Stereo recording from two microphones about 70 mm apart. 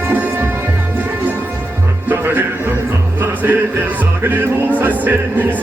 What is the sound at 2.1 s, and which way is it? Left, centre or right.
Music, right.